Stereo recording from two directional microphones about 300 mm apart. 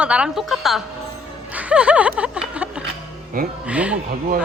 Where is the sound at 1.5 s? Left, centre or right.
Centre.